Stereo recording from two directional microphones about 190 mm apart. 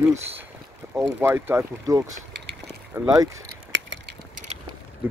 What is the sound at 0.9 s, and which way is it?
Speech, 15° right (ahead or behind).